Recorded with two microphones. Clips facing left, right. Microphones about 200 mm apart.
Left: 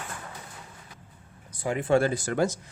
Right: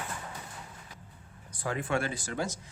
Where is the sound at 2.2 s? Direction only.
60° left (ahead or behind).